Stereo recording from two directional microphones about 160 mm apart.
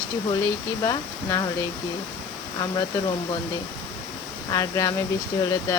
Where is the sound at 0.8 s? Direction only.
25° left (ahead or behind).